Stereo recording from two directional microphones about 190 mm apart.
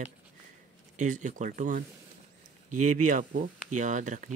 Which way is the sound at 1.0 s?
40° right (ahead or behind).